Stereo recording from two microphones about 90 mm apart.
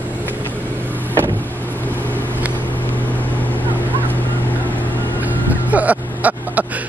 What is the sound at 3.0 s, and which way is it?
Vehicle, 20° left (ahead or behind).